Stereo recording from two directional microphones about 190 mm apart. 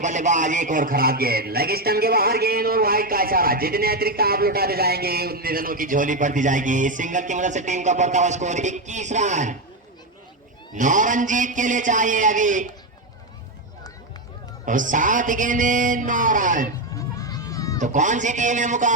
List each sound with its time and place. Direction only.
0.0 s a man's voice: 40° right (ahead or behind)
10.8 s a man's voice: 40° right (ahead or behind)
14.6 s a man's voice: 45° right (ahead or behind)
17.0 s a sound: 20° left (ahead or behind)
17.7 s a man's voice: 40° right (ahead or behind)